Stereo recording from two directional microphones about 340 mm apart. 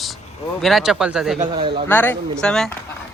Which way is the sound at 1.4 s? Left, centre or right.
Centre.